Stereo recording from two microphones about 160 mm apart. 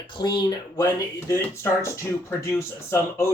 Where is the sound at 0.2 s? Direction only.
90° left.